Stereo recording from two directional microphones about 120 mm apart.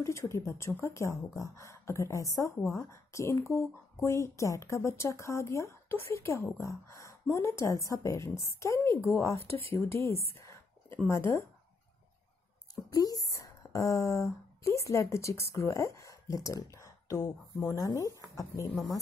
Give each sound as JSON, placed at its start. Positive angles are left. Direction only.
{"t": 0.0, "sound": "speech", "side_deg": 25}
{"t": 10.3, "sound": "a sound", "side_deg": 25}
{"t": 11.1, "sound": "speech", "side_deg": 20}
{"t": 12.9, "sound": "speech", "side_deg": 30}